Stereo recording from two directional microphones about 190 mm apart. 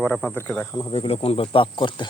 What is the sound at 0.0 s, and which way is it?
Speech, 5° left (ahead or behind).